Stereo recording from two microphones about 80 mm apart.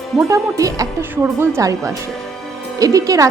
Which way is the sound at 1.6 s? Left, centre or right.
Right.